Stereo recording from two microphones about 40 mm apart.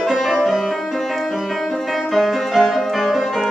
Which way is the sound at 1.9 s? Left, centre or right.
Centre.